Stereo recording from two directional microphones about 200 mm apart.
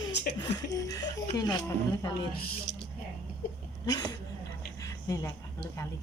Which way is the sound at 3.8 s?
20° left (ahead or behind).